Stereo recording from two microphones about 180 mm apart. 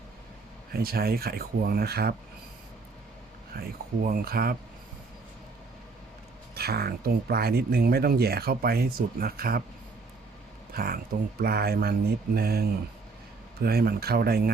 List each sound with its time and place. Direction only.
0.7 s speech: 60° right (ahead or behind)
3.5 s speech: 55° right (ahead or behind)
6.5 s speech: 60° right (ahead or behind)
10.8 s speech: 55° right (ahead or behind)